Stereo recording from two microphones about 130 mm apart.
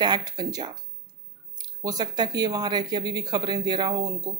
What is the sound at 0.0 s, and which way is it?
Speech, 35° right (ahead or behind).